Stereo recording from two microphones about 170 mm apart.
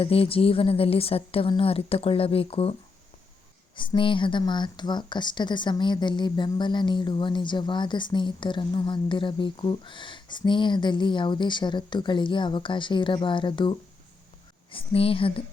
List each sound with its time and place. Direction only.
0.0 s a woman's voice: 35° left (ahead or behind)
3.8 s a woman's voice: 30° left (ahead or behind)